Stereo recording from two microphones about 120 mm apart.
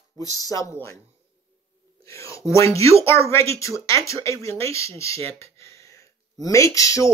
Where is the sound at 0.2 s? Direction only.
30° left (ahead or behind).